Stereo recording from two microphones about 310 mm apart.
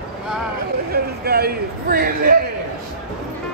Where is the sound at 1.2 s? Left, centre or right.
Right.